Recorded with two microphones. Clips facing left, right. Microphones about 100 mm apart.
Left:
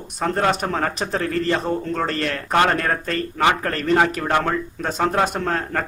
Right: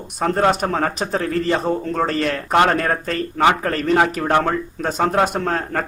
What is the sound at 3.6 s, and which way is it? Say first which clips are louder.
A man's voice: right 1 dB; 5° right (ahead or behind).